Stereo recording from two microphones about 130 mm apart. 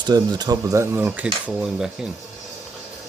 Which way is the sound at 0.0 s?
30° right (ahead or behind).